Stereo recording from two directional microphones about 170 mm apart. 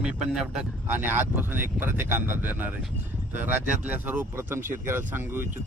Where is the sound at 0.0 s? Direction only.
5° right (ahead or behind).